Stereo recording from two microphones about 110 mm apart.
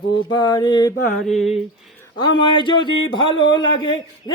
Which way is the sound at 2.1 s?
45° left (ahead or behind).